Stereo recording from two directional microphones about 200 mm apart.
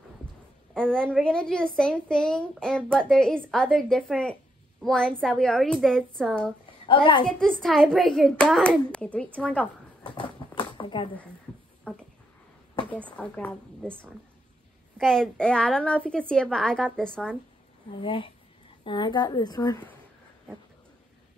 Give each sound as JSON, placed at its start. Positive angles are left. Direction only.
{"t": 0.7, "sound": "a woman's voice", "side_deg": 5}
{"t": 6.9, "sound": "a woman's voice", "side_deg": 25}
{"t": 7.2, "sound": "a woman's voice", "side_deg": 5}
{"t": 10.1, "sound": "a sound", "side_deg": 25}
{"t": 11.9, "sound": "a sound", "side_deg": 5}
{"t": 13.1, "sound": "a woman's voice", "side_deg": 5}
{"t": 18.0, "sound": "a woman's voice", "side_deg": 25}